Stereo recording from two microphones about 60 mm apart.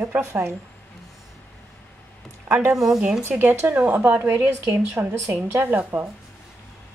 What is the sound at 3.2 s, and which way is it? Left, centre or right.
A woman's voice, right.